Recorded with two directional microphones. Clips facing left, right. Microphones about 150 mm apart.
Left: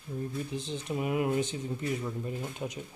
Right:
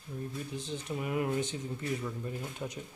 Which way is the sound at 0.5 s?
20° left (ahead or behind).